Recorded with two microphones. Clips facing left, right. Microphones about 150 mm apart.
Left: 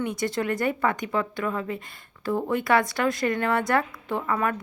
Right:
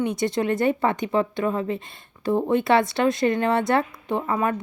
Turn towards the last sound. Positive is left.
turn(degrees=-20)  # may be behind; listen again after turning